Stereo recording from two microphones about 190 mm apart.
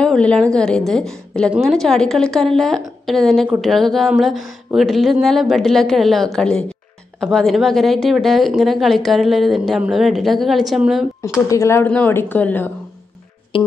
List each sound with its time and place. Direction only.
0.0 s speech: 5° left (ahead or behind)
11.4 s speech: 15° left (ahead or behind)
13.5 s music: 30° left (ahead or behind)